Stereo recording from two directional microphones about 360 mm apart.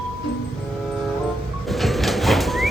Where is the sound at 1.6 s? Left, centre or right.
Centre.